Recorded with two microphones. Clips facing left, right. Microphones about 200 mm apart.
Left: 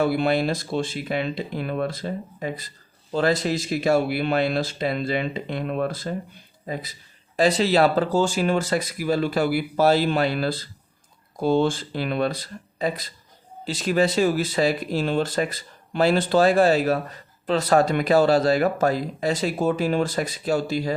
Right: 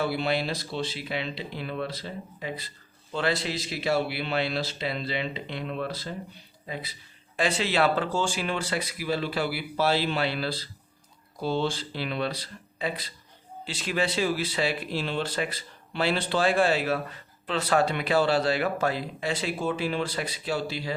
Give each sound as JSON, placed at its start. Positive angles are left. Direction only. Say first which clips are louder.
{"t": 0.0, "sound": "speech", "louder": "left 6 dB", "side_deg": 50}